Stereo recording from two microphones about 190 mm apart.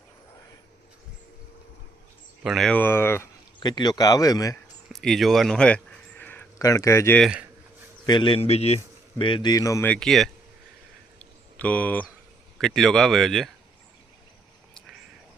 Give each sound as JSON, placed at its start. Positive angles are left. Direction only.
{"t": 2.4, "sound": "speech", "side_deg": 0}
{"t": 4.9, "sound": "speech", "side_deg": 0}
{"t": 7.2, "sound": "speech", "side_deg": -5}
{"t": 8.0, "sound": "a man's voice", "side_deg": 25}
{"t": 9.9, "sound": "speech", "side_deg": 0}
{"t": 11.2, "sound": "a sound", "side_deg": 10}
{"t": 12.5, "sound": "speech", "side_deg": 0}